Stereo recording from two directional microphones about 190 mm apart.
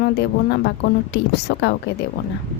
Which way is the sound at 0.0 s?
65° left (ahead or behind).